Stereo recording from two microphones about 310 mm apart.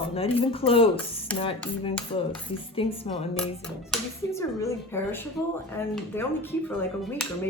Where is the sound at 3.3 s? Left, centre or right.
Centre.